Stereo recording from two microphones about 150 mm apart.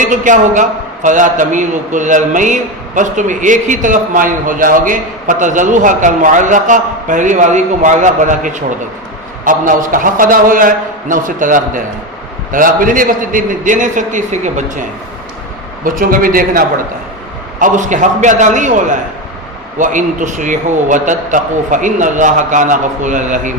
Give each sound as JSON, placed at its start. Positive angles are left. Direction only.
{"t": 0.0, "sound": "a man's voice", "side_deg": -60}
{"t": 15.8, "sound": "a man's voice", "side_deg": -70}
{"t": 17.6, "sound": "a man's voice", "side_deg": -55}